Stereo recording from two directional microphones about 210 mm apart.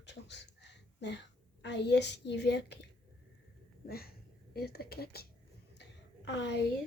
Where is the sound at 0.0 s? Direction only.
55° left (ahead or behind).